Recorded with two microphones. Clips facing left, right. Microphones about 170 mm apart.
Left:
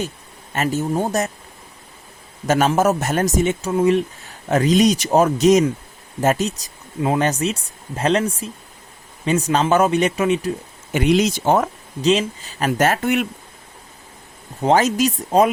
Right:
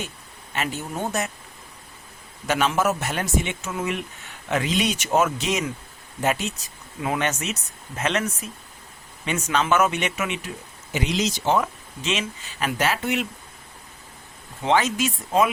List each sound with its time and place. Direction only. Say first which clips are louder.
0.5 s speech: left 8 dB; 40° left (ahead or behind)
2.5 s speech: left 6 dB; 40° left (ahead or behind)
10.9 s speech: left 8 dB; 55° left (ahead or behind)
14.6 s speech: left 5 dB; 40° left (ahead or behind)